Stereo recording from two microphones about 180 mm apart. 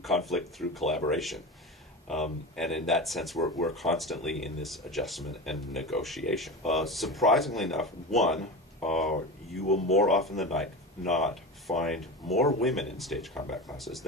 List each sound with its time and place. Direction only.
0.0 s speech: centre (ahead or behind)
2.5 s speech: centre (ahead or behind)
9.6 s speech: 40° left (ahead or behind)
9.9 s speech: centre (ahead or behind)